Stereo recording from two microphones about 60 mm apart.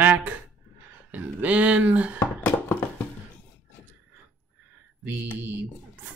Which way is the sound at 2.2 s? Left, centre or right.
Left.